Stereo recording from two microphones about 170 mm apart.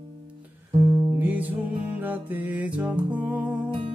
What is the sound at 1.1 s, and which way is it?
Music, 10° right (ahead or behind).